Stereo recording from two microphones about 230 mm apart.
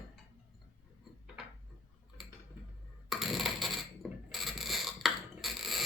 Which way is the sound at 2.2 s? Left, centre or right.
Centre.